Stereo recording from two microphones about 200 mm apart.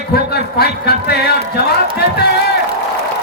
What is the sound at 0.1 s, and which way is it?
A man's voice, 50° left (ahead or behind).